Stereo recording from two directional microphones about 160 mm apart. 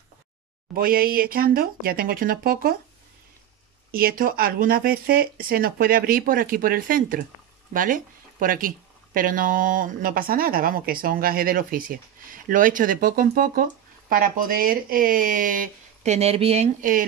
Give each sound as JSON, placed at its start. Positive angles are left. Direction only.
{"t": 0.7, "sound": "speech", "side_deg": -65}
{"t": 3.9, "sound": "speech", "side_deg": -65}